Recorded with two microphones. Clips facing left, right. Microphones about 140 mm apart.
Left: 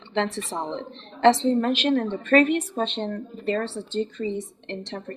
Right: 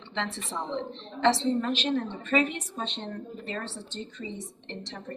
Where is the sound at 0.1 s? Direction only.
45° left (ahead or behind).